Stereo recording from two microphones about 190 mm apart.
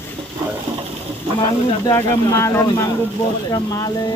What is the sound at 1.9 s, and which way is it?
Speech, 15° left (ahead or behind).